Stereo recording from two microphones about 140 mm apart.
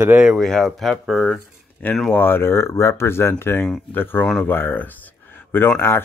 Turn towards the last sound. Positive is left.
turn(degrees=15)  # may be behind; listen again after turning